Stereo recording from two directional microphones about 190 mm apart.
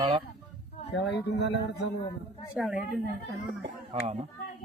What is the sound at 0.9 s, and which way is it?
Speech, 65° left (ahead or behind).